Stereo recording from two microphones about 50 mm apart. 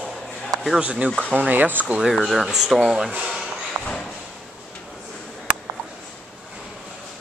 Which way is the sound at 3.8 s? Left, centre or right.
Centre.